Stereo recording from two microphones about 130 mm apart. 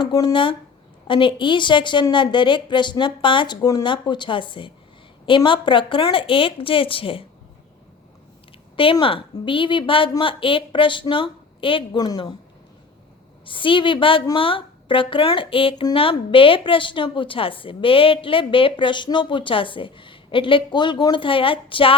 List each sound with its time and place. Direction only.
0.0 s speech: 30° left (ahead or behind)
1.0 s a woman's voice: 40° left (ahead or behind)
8.7 s a woman's voice: 45° left (ahead or behind)
13.4 s a woman's voice: 40° left (ahead or behind)